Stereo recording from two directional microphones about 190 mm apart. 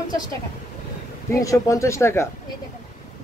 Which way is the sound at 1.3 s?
15° left (ahead or behind).